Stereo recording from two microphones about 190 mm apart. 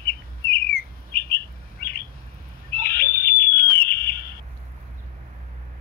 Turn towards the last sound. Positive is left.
turn(degrees=50)  # may be behind; listen again after turning